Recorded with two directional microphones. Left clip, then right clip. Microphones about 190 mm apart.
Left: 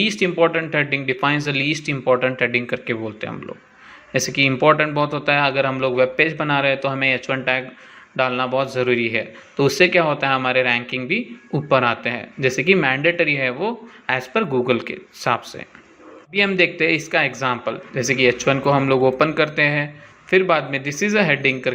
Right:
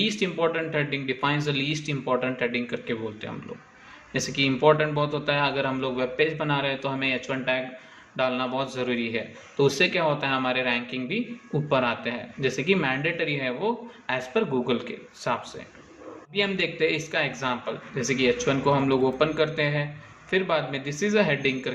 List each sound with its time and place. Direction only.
0.0 s a man's voice: 40° left (ahead or behind)